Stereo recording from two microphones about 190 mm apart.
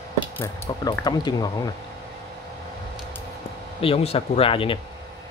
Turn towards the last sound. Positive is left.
turn(degrees=30)  # may be behind; listen again after turning